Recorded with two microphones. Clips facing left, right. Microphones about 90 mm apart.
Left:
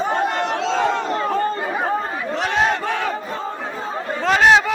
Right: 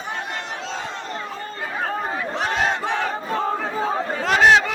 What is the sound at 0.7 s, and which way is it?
Crowd, 85° left.